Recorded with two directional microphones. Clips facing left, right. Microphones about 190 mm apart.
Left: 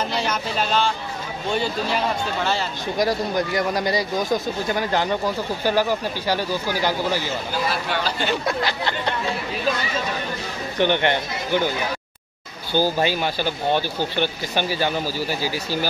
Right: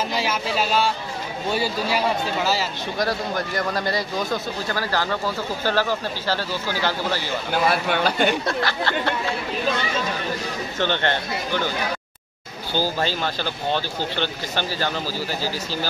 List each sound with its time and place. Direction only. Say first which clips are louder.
0.1 s speech: even; 5° right (ahead or behind)
3.0 s speech: left 3 dB; 15° left (ahead or behind)
7.5 s speech: right 5 dB; 55° right (ahead or behind)
8.5 s speech: even; 15° left (ahead or behind)
10.8 s speech: left 4 dB; 15° left (ahead or behind)
12.7 s speech: left 4 dB; 15° left (ahead or behind)